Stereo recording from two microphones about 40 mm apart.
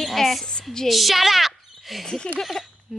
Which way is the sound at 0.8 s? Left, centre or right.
Centre.